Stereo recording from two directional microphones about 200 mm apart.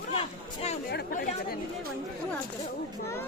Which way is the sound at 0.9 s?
50° left (ahead or behind).